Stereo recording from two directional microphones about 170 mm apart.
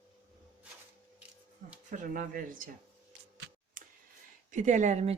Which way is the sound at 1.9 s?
50° right (ahead or behind).